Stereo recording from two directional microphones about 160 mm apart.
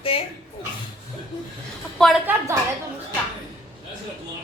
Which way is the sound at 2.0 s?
5° left (ahead or behind).